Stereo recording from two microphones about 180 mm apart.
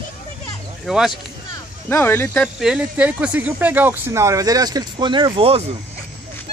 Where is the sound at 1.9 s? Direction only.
10° left (ahead or behind).